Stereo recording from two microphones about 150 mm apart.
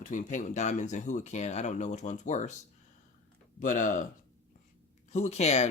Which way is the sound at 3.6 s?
60° left (ahead or behind).